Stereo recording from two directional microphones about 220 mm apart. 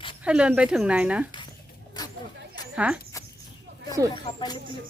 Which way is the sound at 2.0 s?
20° left (ahead or behind).